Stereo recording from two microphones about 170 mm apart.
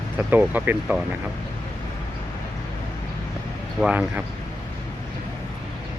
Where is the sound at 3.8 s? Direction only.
5° right (ahead or behind).